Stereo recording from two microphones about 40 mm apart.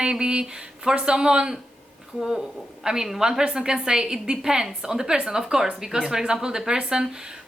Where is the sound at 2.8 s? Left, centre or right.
Centre.